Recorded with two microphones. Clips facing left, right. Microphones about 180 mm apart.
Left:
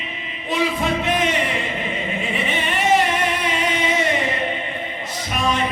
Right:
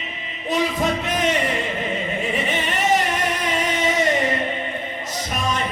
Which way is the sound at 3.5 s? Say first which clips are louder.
Even; 40° right (ahead or behind).